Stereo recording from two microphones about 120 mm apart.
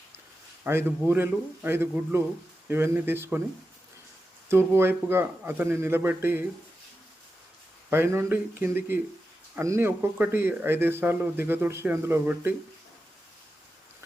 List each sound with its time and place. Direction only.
0.6 s speech: 20° right (ahead or behind)
4.4 s speech: 20° right (ahead or behind)
7.9 s speech: 20° right (ahead or behind)